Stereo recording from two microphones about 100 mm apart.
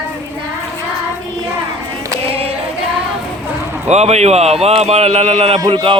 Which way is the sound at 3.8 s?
90° right.